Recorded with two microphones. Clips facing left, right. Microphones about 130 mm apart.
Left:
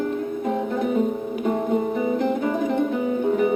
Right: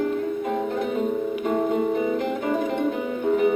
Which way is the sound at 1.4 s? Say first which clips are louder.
Left 1 dB; 40° left (ahead or behind).